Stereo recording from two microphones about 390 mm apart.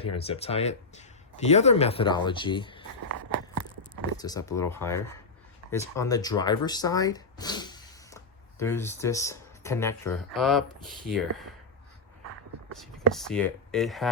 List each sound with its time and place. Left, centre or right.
0.0 s speech: centre
3.1 s a sound: right
4.2 s speech: centre
13.1 s speech: centre